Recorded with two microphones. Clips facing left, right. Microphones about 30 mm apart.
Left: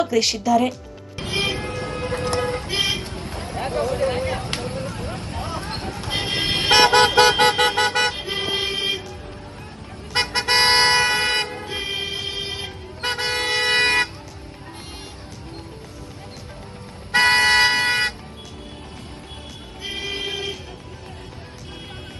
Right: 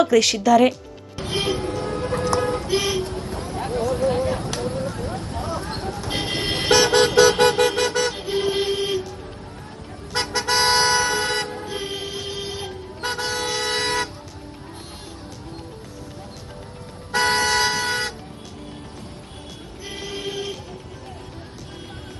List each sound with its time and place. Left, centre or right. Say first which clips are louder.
1.2 s music: even; left
4.9 s a sound: right 1 dB; left
6.0 s vehicle: left 3 dB; left
10.2 s toot: left 2 dB; left
17.1 s toot: left 4 dB; left
19.8 s a sound: left 3 dB; left